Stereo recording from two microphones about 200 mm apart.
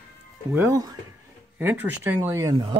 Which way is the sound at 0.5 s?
10° right (ahead or behind).